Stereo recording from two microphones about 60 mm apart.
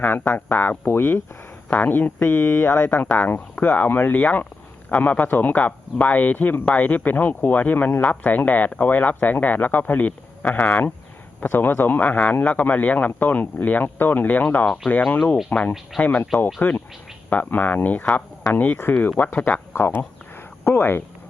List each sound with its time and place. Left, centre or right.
0.0 s speech: left
2.4 s speech: left
2.6 s speech: left